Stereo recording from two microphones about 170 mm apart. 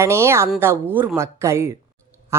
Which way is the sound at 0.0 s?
15° right (ahead or behind).